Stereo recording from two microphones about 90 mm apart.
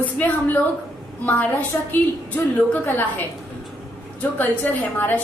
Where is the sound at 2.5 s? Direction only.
20° left (ahead or behind).